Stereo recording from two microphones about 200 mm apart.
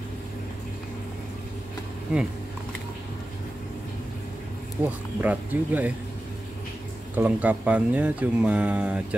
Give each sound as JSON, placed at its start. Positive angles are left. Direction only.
{"t": 2.1, "sound": "speech", "side_deg": -5}
{"t": 4.8, "sound": "speech", "side_deg": -10}
{"t": 7.2, "sound": "speech", "side_deg": -10}